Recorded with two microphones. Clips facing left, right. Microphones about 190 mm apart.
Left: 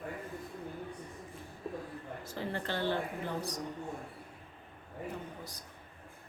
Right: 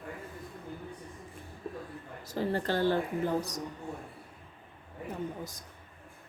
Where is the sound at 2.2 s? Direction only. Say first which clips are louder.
Right 8 dB; 40° right (ahead or behind).